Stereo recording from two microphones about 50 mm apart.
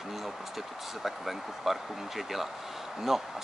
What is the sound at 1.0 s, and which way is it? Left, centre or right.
Speech, centre.